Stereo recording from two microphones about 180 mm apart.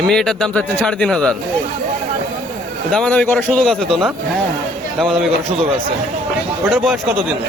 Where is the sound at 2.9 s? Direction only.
5° left (ahead or behind).